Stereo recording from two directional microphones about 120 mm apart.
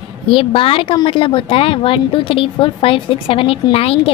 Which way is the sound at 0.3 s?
50° left (ahead or behind).